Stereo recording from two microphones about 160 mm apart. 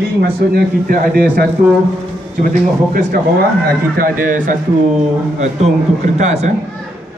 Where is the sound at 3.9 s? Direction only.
60° right (ahead or behind); by 6.4 s 45° right (ahead or behind).